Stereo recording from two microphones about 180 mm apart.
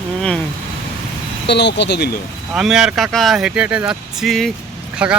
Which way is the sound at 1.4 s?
70° left (ahead or behind).